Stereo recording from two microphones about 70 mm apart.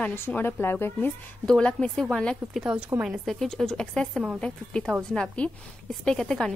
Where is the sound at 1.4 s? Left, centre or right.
Centre.